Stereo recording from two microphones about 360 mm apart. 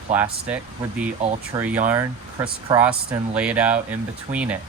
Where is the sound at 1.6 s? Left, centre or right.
Centre.